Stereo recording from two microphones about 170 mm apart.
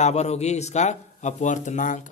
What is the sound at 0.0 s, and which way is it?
A man's voice, 40° left (ahead or behind).